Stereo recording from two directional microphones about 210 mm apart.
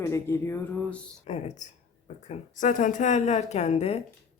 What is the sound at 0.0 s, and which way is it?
Speech, 10° left (ahead or behind).